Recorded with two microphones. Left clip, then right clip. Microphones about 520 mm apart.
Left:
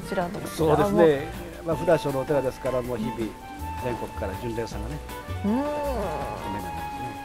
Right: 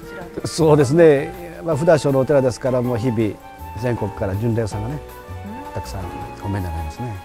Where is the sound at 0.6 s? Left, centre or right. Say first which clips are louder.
Right 6 dB; right.